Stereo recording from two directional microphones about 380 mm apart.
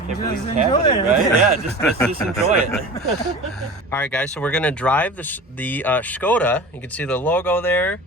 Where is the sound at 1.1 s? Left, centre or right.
Centre.